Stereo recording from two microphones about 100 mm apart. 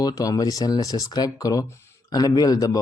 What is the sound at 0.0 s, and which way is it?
Speech, 35° left (ahead or behind).